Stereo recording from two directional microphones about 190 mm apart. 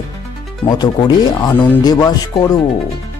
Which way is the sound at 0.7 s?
20° left (ahead or behind).